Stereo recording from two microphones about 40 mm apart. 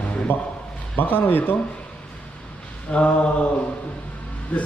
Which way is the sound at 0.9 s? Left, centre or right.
Left.